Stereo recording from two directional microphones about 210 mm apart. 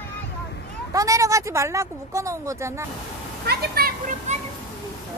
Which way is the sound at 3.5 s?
45° right (ahead or behind).